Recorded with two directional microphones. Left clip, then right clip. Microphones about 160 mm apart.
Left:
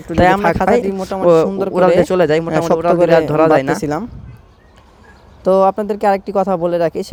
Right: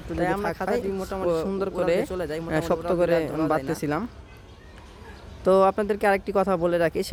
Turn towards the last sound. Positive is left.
turn(degrees=20)  # may be behind; listen again after turning